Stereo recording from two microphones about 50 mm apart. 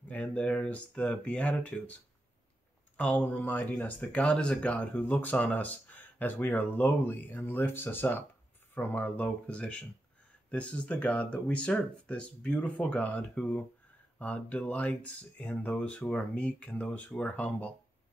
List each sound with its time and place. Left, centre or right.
0.1 s speech: left
3.0 s speech: left